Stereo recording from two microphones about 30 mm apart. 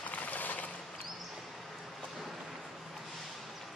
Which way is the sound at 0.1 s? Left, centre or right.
Left.